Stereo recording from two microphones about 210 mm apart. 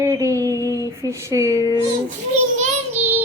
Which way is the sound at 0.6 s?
15° left (ahead or behind).